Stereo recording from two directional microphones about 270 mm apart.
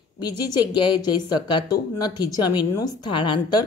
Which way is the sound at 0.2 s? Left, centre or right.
Centre.